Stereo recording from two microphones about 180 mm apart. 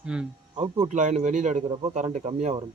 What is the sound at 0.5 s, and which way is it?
Speech, 35° right (ahead or behind).